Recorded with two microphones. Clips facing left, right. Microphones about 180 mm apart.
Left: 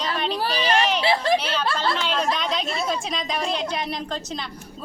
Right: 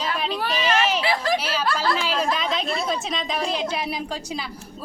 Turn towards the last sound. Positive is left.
turn(degrees=-5)  # may be behind; listen again after turning